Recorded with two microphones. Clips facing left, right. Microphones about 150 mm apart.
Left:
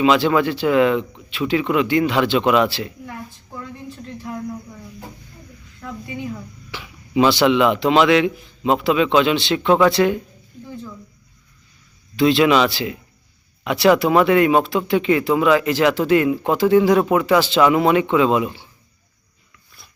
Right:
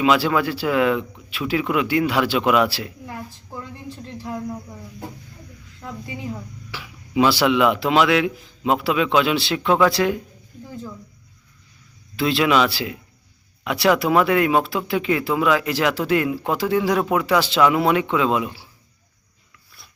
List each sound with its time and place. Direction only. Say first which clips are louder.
0.0 s speech: left 3 dB; 5° right (ahead or behind)
3.1 s a sound: even; 30° right (ahead or behind)
6.7 s speech: left 1 dB; 5° right (ahead or behind)
12.1 s speech: left 4 dB; centre (ahead or behind)